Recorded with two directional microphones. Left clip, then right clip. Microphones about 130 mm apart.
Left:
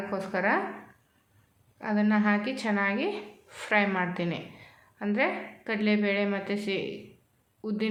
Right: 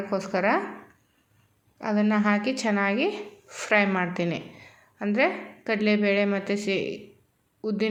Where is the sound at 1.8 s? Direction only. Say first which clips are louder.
Right 2 dB; 40° right (ahead or behind).